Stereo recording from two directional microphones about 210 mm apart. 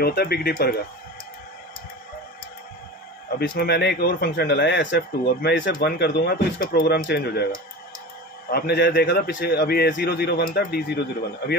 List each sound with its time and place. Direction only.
0.0 s a man's voice: 50° left (ahead or behind)
3.3 s a man's voice: 50° left (ahead or behind)